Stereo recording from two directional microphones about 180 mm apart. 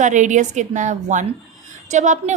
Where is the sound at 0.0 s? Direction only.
45° right (ahead or behind).